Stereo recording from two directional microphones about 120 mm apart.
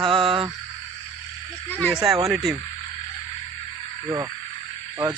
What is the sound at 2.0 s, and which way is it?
Speech, 25° right (ahead or behind).